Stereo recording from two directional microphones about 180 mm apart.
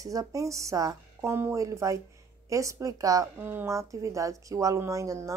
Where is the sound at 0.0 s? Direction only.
20° right (ahead or behind).